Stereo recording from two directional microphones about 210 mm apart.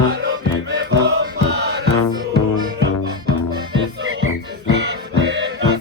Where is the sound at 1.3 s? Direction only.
55° right (ahead or behind).